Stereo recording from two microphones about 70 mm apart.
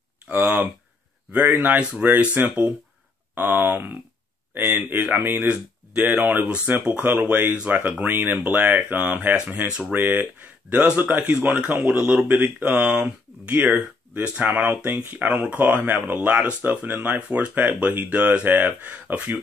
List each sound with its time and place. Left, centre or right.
0.3 s a sound: centre
1.5 s speech: right
9.9 s speech: right